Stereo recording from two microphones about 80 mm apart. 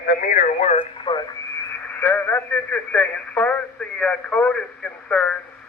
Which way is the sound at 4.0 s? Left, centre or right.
Centre.